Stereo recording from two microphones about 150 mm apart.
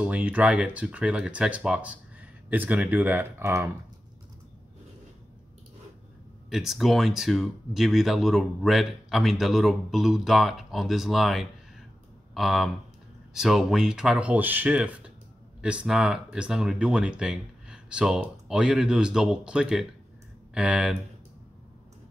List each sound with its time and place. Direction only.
0.0 s speech: 10° right (ahead or behind)
6.5 s speech: centre (ahead or behind)